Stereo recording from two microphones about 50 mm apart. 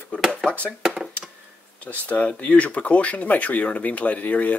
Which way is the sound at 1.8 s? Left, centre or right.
Left.